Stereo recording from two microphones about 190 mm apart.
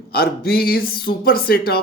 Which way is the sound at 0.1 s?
55° left (ahead or behind).